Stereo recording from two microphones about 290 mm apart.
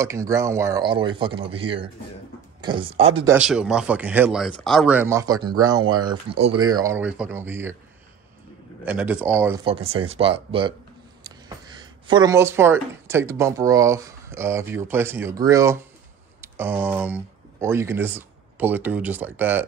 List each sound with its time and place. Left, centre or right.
0.0 s speech: centre
3.3 s speech: centre
6.8 s speech: centre
8.8 s speech: centre